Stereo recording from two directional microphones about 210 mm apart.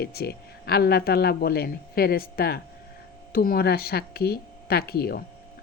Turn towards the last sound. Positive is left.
turn(degrees=50)  # may be behind; listen again after turning